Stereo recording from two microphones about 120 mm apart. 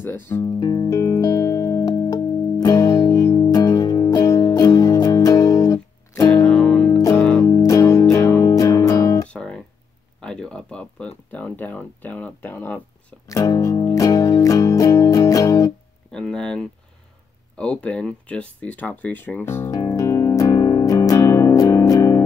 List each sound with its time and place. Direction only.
0.0 s speech: 20° left (ahead or behind)
0.5 s music: 35° left (ahead or behind)
6.3 s music: 5° left (ahead or behind)
7.4 s music: 25° left (ahead or behind)
9.3 s music: 5° left (ahead or behind)
10.2 s a sound: 5° left (ahead or behind)
13.3 s music: 30° left (ahead or behind)
16.1 s a sound: 5° left (ahead or behind)
19.8 s music: 30° left (ahead or behind)